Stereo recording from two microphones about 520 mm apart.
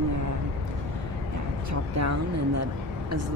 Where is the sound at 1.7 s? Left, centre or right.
Right.